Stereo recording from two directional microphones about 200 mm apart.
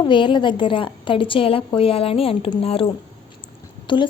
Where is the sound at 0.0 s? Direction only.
25° left (ahead or behind).